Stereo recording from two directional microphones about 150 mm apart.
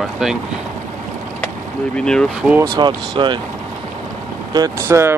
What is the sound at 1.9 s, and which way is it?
Speech, 5° left (ahead or behind).